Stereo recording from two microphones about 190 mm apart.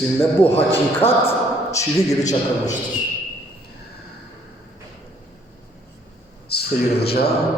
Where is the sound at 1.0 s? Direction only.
30° left (ahead or behind).